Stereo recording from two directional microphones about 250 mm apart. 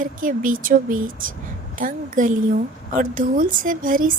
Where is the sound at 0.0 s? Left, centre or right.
Right.